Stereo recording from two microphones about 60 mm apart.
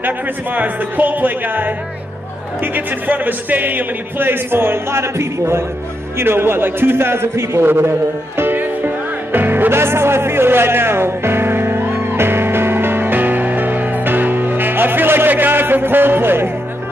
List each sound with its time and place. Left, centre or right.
0.0 s a man's voice: right
8.4 s music: right